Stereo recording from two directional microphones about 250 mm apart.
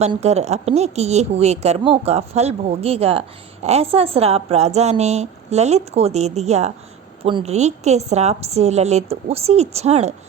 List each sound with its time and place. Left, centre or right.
0.0 s a woman's voice: right